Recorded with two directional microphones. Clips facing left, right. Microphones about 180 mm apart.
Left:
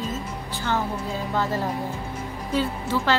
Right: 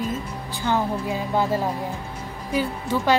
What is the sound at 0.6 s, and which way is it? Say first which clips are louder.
Speech: right 3 dB; 15° right (ahead or behind).